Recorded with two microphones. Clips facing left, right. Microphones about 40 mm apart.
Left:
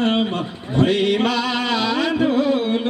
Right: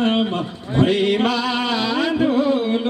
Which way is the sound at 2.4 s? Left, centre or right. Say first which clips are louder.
Even; left.